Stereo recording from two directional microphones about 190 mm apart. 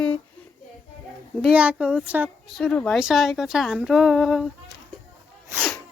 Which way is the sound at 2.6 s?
5° left (ahead or behind).